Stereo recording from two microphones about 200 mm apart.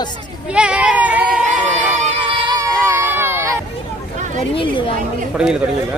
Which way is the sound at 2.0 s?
25° right (ahead or behind).